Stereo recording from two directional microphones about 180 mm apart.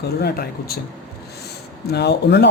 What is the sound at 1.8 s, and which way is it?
Speech, 65° left (ahead or behind).